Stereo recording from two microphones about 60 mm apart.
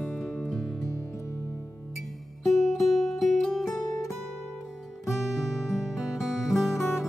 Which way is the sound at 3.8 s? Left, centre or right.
Left.